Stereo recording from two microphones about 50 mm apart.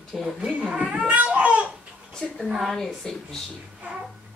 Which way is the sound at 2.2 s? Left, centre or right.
Centre.